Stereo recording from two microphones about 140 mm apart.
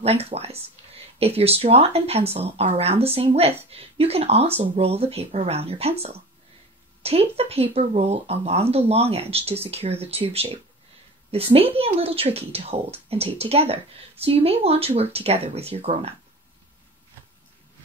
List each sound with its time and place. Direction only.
0.0 s speech: 45° right (ahead or behind)